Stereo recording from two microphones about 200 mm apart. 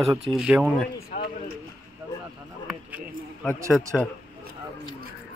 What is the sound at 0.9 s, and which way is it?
Speech, 50° left (ahead or behind).